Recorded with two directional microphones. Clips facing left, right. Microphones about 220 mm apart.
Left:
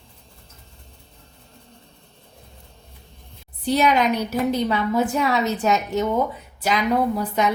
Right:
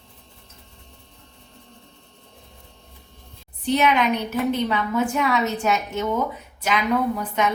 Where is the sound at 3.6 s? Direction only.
35° left (ahead or behind).